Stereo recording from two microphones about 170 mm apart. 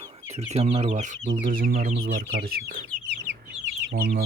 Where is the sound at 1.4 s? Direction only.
55° right (ahead or behind).